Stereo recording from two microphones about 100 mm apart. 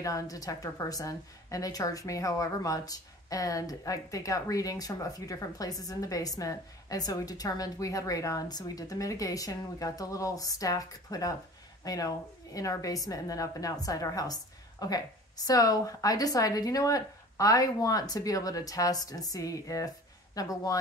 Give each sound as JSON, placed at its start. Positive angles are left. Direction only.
{"t": 0.0, "sound": "a woman's voice", "side_deg": 35}